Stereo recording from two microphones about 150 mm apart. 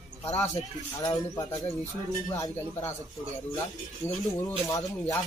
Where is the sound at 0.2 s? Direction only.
45° left (ahead or behind).